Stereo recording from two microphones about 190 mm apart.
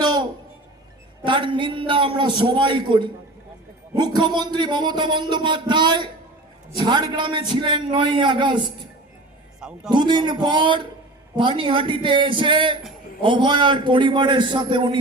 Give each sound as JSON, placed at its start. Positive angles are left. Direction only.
{"t": 0.0, "sound": "music", "side_deg": -20}
{"t": 1.2, "sound": "a man's voice", "side_deg": -25}
{"t": 9.6, "sound": "a man's voice", "side_deg": -5}
{"t": 9.9, "sound": "a man's voice", "side_deg": -25}